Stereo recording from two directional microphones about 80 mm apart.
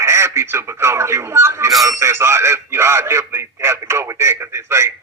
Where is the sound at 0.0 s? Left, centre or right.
Right.